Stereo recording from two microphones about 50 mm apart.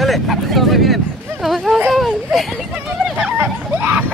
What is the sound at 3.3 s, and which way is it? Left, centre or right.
Hubbub, right.